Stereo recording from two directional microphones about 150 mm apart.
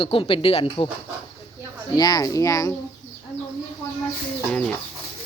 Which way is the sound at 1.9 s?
25° left (ahead or behind).